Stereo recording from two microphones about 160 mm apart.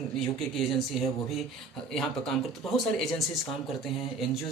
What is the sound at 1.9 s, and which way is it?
Speech, centre (ahead or behind).